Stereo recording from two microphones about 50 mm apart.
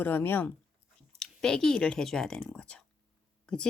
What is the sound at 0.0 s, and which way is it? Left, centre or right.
Speech, left.